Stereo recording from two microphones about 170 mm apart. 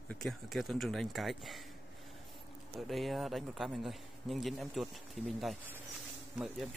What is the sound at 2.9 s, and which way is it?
A man's voice, centre (ahead or behind).